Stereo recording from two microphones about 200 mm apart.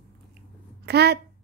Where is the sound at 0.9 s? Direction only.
55° right (ahead or behind).